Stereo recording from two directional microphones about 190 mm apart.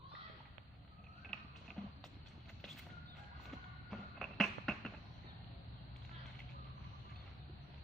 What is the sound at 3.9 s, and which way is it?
Music, centre (ahead or behind).